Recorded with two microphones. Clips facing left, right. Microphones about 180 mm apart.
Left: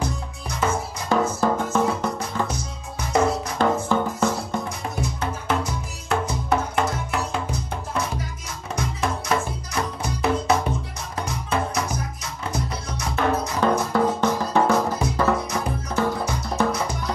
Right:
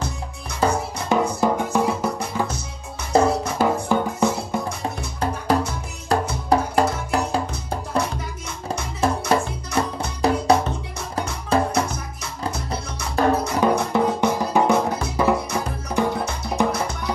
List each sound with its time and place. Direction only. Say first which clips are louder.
0.6 s music: right 3 dB; 30° right (ahead or behind)
1.0 s music: right 1 dB; 15° right (ahead or behind)
3.1 s music: right 3 dB; 30° right (ahead or behind)
3.5 s music: right 1 dB; 10° right (ahead or behind)
4.6 s music: right 1 dB; 30° right (ahead or behind)
13.1 s music: right 4 dB; 35° right (ahead or behind)
13.6 s music: left 1 dB; 15° right (ahead or behind)